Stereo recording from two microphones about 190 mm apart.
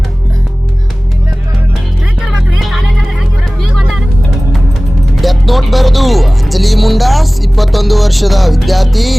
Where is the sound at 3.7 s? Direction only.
Centre (ahead or behind).